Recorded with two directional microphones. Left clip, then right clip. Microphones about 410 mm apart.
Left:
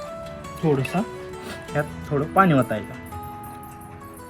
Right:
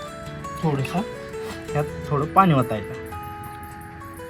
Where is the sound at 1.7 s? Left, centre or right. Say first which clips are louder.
Even; centre.